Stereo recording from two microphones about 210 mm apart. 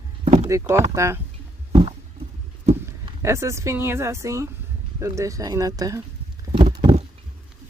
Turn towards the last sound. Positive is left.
turn(degrees=-30)  # may be behind; listen again after turning